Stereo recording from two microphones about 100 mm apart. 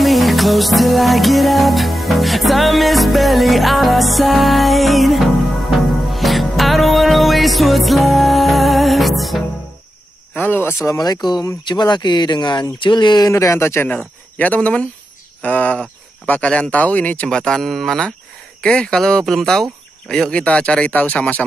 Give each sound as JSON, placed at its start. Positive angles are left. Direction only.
{"t": 0.0, "sound": "music", "side_deg": 0}
{"t": 10.3, "sound": "cricket", "side_deg": 20}
{"t": 10.9, "sound": "speech", "side_deg": 35}
{"t": 13.3, "sound": "speech", "side_deg": 30}
{"t": 13.8, "sound": "speech", "side_deg": 15}